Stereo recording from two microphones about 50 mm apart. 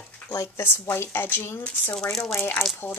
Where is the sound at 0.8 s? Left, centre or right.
Left.